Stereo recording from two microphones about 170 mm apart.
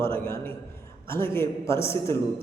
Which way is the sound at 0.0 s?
15° left (ahead or behind).